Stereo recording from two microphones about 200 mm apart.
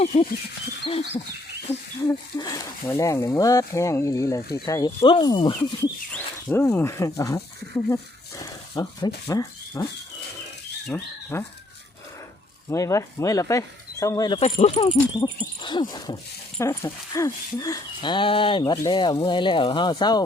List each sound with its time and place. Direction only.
0.0 s speech: 30° left (ahead or behind)
1.7 s speech: 10° left (ahead or behind)
6.1 s speech: 10° left (ahead or behind)
10.9 s speech: 10° left (ahead or behind)
12.7 s speech: 15° left (ahead or behind)
14.3 s speech: 30° left (ahead or behind)